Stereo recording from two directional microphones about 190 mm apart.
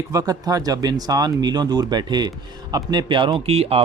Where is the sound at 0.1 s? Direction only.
20° right (ahead or behind).